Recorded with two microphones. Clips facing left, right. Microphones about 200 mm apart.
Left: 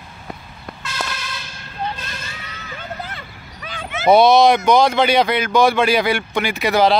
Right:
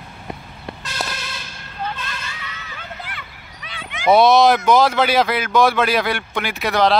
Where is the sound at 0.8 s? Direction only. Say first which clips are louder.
Left 1 dB; 30° right (ahead or behind).